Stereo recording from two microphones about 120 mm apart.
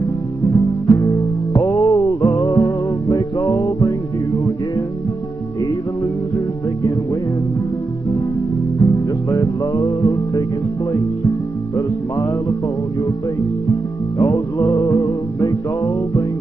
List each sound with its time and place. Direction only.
0.4 s music: 25° left (ahead or behind)
8.7 s music: 25° left (ahead or behind)
13.7 s music: 25° left (ahead or behind)